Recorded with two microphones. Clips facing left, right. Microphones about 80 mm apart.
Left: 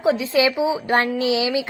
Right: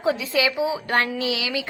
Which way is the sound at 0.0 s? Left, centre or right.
Left.